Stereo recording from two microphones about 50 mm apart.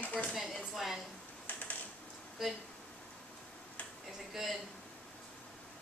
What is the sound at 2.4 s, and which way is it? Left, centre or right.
Speech, centre.